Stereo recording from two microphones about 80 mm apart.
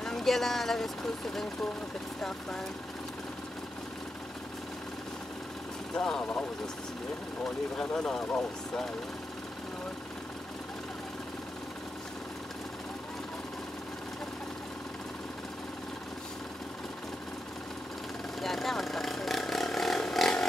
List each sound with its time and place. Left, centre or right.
0.0 s speech: centre
5.9 s speech: centre
7.8 s speech: centre
18.4 s a sound: centre